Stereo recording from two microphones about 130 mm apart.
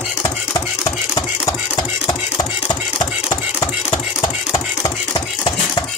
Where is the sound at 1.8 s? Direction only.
35° left (ahead or behind).